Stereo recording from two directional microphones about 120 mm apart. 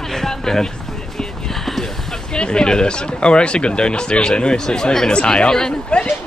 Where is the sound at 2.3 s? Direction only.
5° left (ahead or behind).